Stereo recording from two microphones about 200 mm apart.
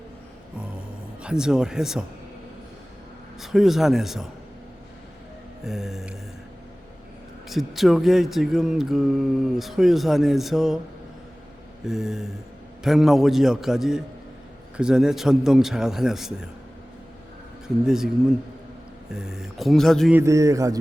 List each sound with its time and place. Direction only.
1.2 s speech: 5° right (ahead or behind)
3.4 s speech: centre (ahead or behind)
5.6 s speech: centre (ahead or behind)
7.5 s speech: centre (ahead or behind)
11.9 s speech: centre (ahead or behind)
17.8 s speech: centre (ahead or behind)
19.1 s speech: 5° right (ahead or behind)
20.1 s a man's voice: 15° right (ahead or behind)